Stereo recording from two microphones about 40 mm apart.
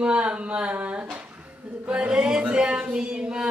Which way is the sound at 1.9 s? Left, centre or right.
Right.